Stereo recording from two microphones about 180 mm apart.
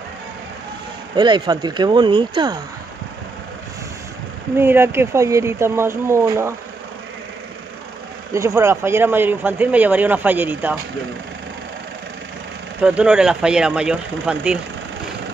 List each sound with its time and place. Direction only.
1.1 s speech: 25° right (ahead or behind)
4.6 s speech: 15° right (ahead or behind)
8.3 s speech: 15° right (ahead or behind)
12.8 s speech: 5° right (ahead or behind)